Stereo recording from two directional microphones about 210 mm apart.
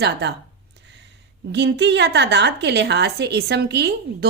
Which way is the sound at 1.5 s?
55° right (ahead or behind).